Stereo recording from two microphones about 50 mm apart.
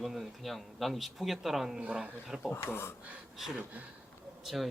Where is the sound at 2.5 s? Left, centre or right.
Left.